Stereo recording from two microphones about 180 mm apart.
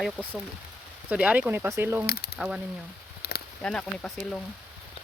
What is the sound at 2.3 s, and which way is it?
Speech, 5° right (ahead or behind).